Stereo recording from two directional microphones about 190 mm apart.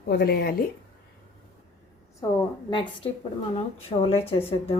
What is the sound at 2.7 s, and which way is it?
A woman's voice, 25° left (ahead or behind).